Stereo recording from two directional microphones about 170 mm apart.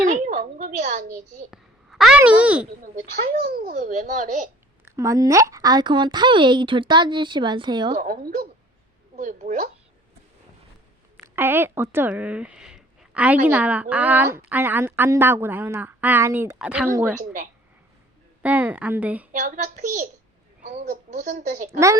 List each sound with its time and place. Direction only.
0.0 s a sound: 45° right (ahead or behind)
1.5 s a sound: centre (ahead or behind)
2.1 s a woman's voice: 5° right (ahead or behind)
2.9 s a child's voice: 60° right (ahead or behind)
4.9 s speech: 20° right (ahead or behind)
7.9 s a child's voice: 55° right (ahead or behind)
11.3 s a woman's voice: 15° right (ahead or behind)
18.4 s a woman's voice: 10° right (ahead or behind)
19.3 s a child's voice: 50° right (ahead or behind)